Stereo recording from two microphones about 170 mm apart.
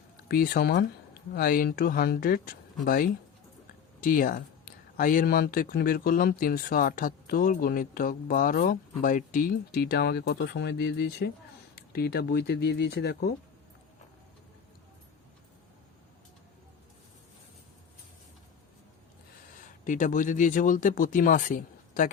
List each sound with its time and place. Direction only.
0.3 s speech: 65° left (ahead or behind)
11.7 s speech: 65° left (ahead or behind)
19.8 s speech: 50° left (ahead or behind)